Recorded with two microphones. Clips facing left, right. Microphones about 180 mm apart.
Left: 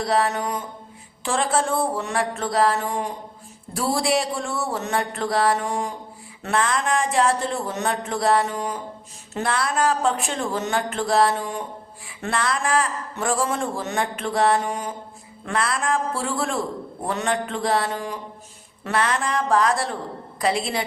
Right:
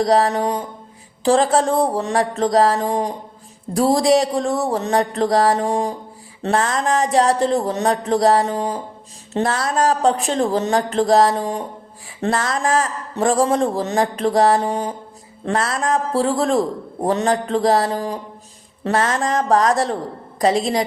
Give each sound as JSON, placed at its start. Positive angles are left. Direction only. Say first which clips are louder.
{"t": 0.0, "sound": "a man's voice", "louder": "right 6 dB", "side_deg": -35}